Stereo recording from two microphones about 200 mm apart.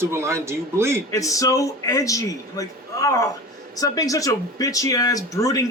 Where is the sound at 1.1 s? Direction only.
15° left (ahead or behind).